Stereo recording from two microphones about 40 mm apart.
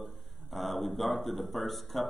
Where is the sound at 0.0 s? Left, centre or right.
Centre.